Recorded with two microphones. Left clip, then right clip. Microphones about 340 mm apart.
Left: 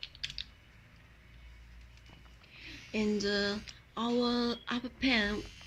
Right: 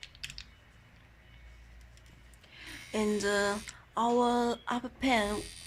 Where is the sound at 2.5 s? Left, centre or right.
Right.